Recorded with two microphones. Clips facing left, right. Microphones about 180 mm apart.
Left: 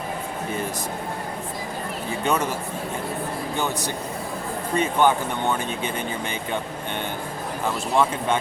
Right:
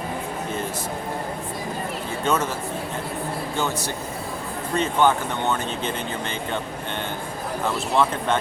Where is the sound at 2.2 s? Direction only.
15° left (ahead or behind).